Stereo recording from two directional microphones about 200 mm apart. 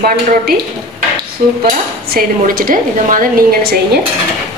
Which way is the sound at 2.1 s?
45° right (ahead or behind).